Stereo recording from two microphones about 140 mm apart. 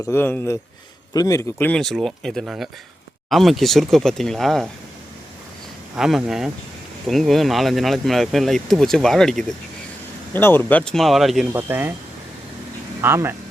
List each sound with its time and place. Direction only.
0.0 s a man's voice: 15° left (ahead or behind)
1.7 s speech: 5° left (ahead or behind)
6.0 s speech: 5° right (ahead or behind)
10.3 s speech: 15° left (ahead or behind); by 11.5 s centre (ahead or behind)
11.5 s speech: 15° right (ahead or behind)
13.0 s speech: 15° right (ahead or behind)